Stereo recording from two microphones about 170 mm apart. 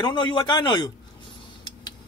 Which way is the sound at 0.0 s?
25° left (ahead or behind).